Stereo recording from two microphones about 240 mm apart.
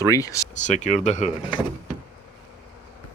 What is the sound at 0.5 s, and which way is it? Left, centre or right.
Speech, left.